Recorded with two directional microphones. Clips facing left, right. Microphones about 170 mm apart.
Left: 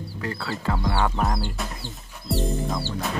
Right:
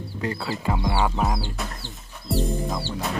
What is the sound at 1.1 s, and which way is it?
Music, centre (ahead or behind).